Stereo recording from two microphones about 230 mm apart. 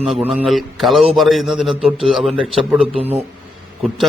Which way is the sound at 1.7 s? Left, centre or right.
Right.